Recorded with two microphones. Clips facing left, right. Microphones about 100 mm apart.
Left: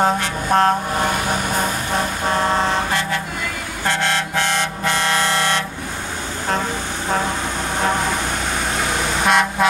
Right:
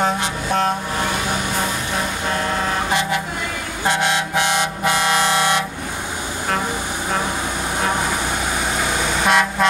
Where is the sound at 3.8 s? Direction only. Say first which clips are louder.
Right 1 dB; 15° right (ahead or behind).